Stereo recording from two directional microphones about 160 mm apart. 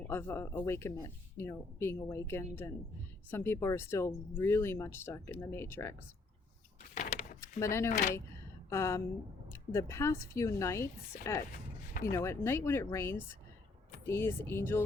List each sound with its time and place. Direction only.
0.0 s speech: 15° left (ahead or behind)
6.9 s a sound: 50° left (ahead or behind)
7.6 s speech: 15° left (ahead or behind)
7.9 s speech: 55° left (ahead or behind)
8.7 s speech: 15° left (ahead or behind)